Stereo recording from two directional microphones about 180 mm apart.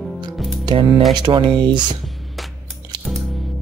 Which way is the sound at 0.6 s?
25° right (ahead or behind).